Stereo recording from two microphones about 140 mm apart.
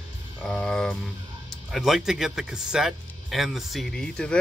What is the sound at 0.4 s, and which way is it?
Music, 5° left (ahead or behind).